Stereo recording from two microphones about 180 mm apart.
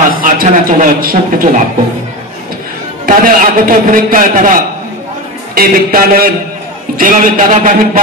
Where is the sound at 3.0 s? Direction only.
50° right (ahead or behind).